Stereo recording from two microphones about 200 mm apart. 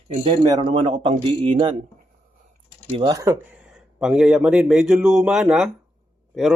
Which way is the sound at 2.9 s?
20° right (ahead or behind).